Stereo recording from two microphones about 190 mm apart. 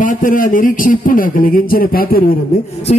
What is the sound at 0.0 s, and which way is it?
A man's voice, 45° left (ahead or behind).